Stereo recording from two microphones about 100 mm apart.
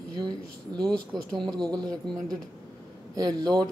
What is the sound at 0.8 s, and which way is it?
Speech, 5° left (ahead or behind).